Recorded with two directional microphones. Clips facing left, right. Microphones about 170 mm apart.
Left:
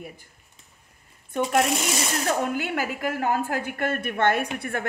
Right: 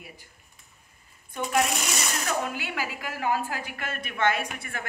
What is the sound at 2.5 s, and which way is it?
A woman's voice, 50° left (ahead or behind).